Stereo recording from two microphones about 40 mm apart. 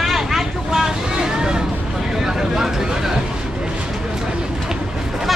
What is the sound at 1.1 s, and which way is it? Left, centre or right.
Vehicle, centre.